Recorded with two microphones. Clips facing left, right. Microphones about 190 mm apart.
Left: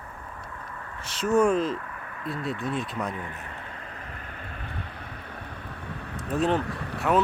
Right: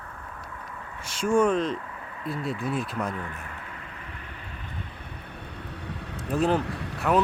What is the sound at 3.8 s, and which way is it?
Vehicle, 40° left (ahead or behind).